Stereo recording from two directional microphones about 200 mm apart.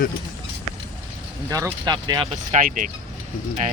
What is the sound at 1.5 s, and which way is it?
Speech, 20° right (ahead or behind).